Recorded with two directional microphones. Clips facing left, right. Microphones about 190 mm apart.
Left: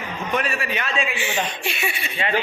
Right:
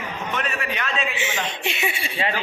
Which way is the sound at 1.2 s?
20° right (ahead or behind).